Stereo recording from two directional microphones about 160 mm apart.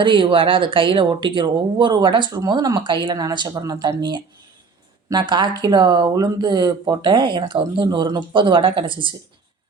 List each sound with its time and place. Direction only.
0.0 s speech: 30° right (ahead or behind)